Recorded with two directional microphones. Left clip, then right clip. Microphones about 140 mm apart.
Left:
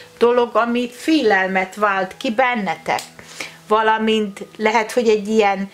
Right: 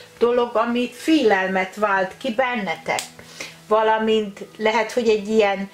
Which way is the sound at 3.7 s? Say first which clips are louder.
Left 2 dB; 45° left (ahead or behind).